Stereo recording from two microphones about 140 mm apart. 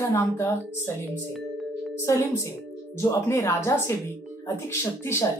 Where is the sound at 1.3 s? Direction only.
Centre (ahead or behind).